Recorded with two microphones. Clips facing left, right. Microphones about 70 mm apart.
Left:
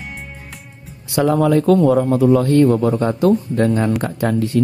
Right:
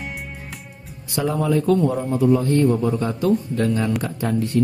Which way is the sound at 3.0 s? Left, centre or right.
Left.